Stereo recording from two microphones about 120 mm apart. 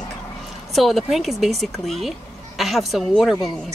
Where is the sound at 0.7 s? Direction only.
Centre (ahead or behind).